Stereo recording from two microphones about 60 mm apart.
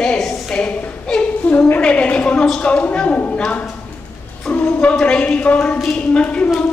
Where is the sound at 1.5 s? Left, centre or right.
Left.